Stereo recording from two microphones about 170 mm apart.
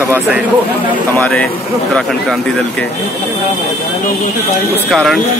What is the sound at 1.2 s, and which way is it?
Speech, 5° left (ahead or behind).